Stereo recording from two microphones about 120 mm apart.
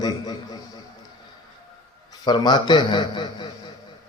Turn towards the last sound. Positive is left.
turn(degrees=40)  # may be behind; listen again after turning